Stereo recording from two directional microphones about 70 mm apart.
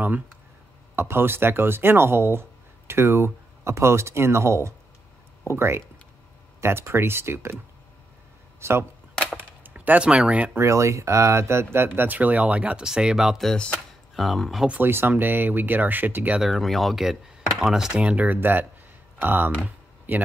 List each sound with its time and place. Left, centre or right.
0.9 s speech: right
9.8 s speech: centre
10.6 s speech: right; by 12.8 s centre
12.8 s speech: centre
13.5 s speech: centre
14.1 s speech: centre
14.7 s speech: right
16.3 s speech: centre
18.0 s speech: right